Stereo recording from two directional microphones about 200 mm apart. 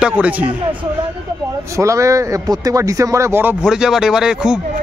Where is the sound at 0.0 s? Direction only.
5° right (ahead or behind).